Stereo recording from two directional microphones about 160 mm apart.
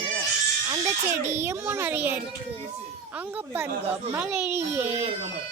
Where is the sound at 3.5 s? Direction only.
15° right (ahead or behind).